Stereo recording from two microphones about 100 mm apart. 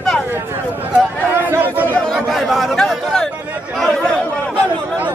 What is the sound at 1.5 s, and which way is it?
Speech, 20° right (ahead or behind).